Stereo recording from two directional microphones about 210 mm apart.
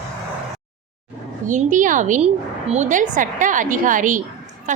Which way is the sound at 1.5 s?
35° right (ahead or behind).